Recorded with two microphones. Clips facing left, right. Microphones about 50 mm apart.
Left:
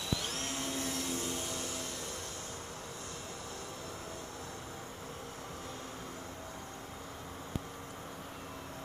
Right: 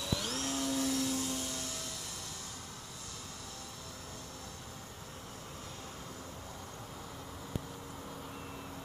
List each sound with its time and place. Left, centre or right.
0.2 s vacuum cleaner: left